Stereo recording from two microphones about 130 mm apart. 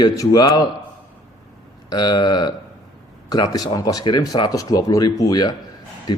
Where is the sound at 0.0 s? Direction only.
30° left (ahead or behind).